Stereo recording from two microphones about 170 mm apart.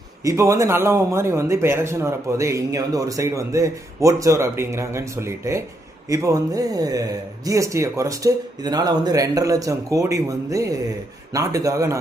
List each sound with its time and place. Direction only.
0.3 s a man's voice: 15° right (ahead or behind)